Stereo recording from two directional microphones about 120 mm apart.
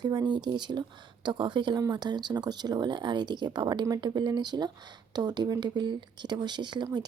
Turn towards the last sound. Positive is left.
turn(degrees=-35)  # may be behind; listen again after turning